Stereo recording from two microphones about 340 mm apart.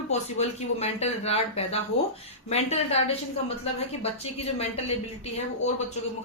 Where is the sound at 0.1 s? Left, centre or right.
Centre.